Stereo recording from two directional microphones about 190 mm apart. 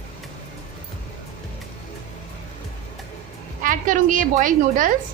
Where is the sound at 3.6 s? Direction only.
45° right (ahead or behind).